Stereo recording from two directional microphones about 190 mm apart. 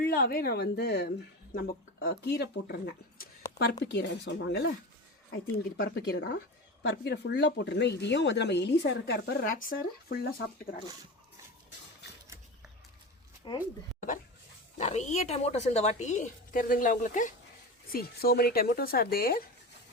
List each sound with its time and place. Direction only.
0.0 s speech: 55° left (ahead or behind)
3.9 s speech: 65° left (ahead or behind)
13.5 s speech: 25° left (ahead or behind)
14.8 s speech: 35° left (ahead or behind)
17.9 s speech: 55° left (ahead or behind)